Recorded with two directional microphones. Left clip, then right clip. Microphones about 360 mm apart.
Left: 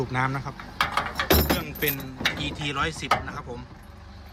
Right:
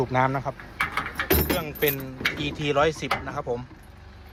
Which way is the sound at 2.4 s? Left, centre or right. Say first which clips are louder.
Right 5 dB; centre.